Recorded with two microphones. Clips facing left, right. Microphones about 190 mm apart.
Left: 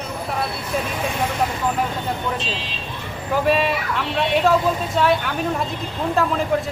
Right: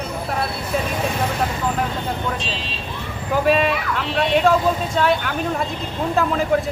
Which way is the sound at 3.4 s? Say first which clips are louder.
Right 2 dB; centre (ahead or behind).